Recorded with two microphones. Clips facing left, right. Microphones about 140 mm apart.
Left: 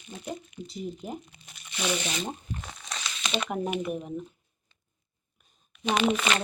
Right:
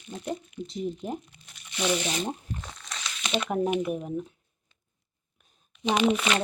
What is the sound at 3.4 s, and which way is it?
Speech, centre (ahead or behind).